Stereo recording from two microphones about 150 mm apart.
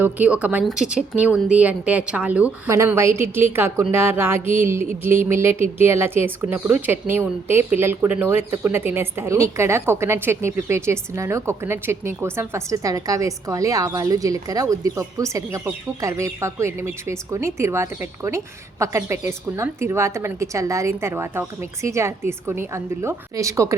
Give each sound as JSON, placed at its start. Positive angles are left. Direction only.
{"t": 0.0, "sound": "a woman's voice", "side_deg": -10}